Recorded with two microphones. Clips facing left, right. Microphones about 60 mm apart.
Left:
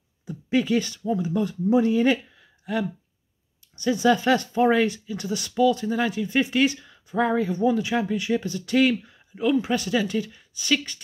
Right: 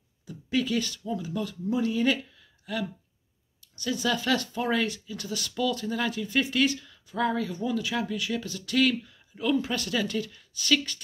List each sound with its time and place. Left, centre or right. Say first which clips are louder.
0.2 s speech: left 5 dB; left